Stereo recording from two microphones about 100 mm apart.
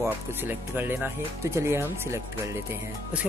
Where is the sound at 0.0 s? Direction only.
20° right (ahead or behind).